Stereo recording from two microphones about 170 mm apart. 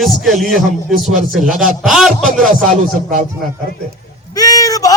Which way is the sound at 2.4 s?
50° right (ahead or behind).